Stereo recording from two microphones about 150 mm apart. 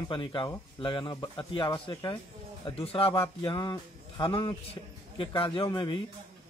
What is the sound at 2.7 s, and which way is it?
A man's voice, 40° left (ahead or behind).